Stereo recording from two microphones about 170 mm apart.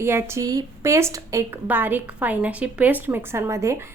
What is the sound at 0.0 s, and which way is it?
A woman's voice, 15° right (ahead or behind).